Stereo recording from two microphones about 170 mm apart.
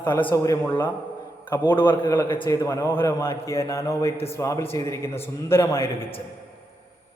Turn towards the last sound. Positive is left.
turn(degrees=15)  # may be behind; listen again after turning